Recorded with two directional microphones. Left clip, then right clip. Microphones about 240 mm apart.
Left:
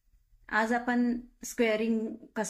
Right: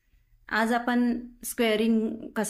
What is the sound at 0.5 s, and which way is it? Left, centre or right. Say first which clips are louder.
A woman's voice: right 3 dB; right.